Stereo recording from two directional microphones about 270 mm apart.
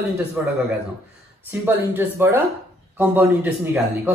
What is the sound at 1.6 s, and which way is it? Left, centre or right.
Speech, centre.